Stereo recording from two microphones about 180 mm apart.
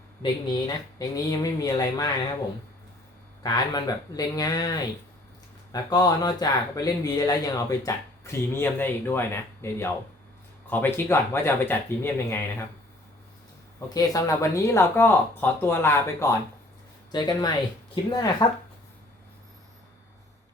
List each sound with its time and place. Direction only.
0.9 s speech: 20° left (ahead or behind)
3.4 s speech: 20° left (ahead or behind)
5.7 s speech: 20° left (ahead or behind)
13.7 s speech: 20° left (ahead or behind)